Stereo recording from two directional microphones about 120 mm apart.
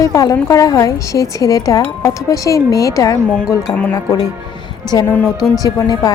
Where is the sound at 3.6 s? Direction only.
10° left (ahead or behind).